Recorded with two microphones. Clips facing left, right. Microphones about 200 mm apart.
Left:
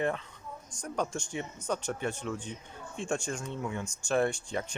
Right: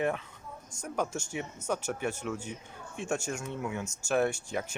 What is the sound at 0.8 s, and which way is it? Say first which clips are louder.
Speech: even; 5° right (ahead or behind).